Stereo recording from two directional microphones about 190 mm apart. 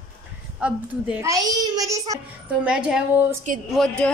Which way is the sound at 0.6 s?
5° right (ahead or behind).